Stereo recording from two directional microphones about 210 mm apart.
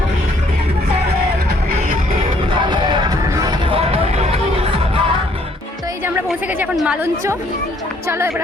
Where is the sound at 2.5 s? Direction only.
20° right (ahead or behind).